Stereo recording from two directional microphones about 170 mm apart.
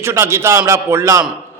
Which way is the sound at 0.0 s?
15° right (ahead or behind).